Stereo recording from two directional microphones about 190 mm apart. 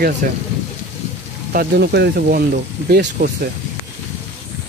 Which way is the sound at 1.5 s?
60° right (ahead or behind).